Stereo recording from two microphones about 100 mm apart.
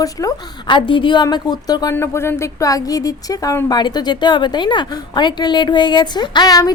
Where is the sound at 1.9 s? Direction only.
25° left (ahead or behind).